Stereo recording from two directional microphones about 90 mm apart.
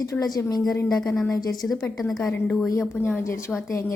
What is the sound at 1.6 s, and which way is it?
Speech, 20° left (ahead or behind).